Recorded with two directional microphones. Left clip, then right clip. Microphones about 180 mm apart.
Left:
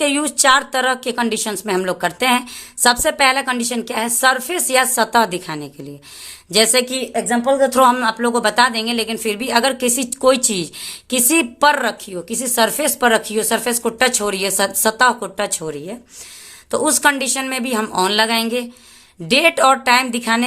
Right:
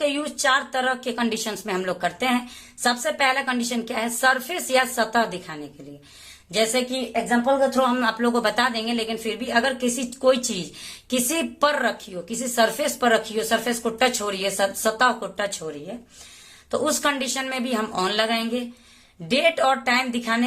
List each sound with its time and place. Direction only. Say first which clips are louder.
0.0 s speech: left 7 dB; 35° left (ahead or behind)
7.1 s speech: left 2 dB; 60° left (ahead or behind)
7.9 s speech: left 4 dB; 25° left (ahead or behind)
16.7 s speech: left 7 dB; 30° left (ahead or behind)